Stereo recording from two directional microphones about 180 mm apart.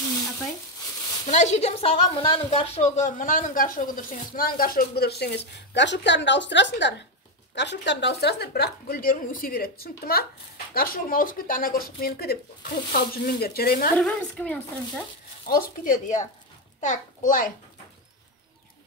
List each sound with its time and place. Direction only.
1.3 s a woman's voice: 40° left (ahead or behind); by 13.9 s 55° left (ahead or behind)
13.9 s speech: 5° left (ahead or behind)
15.4 s a woman's voice: 50° left (ahead or behind)